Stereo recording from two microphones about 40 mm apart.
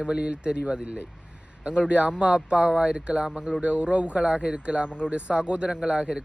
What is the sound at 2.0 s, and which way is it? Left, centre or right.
Speech, right.